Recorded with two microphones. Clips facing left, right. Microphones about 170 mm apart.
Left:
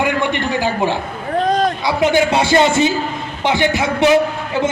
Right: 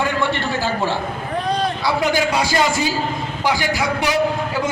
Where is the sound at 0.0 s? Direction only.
20° left (ahead or behind).